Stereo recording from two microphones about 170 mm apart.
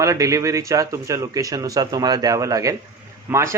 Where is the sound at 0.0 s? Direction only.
20° right (ahead or behind).